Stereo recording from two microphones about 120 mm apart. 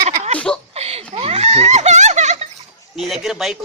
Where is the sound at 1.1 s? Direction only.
55° right (ahead or behind); by 2.5 s 75° right (ahead or behind).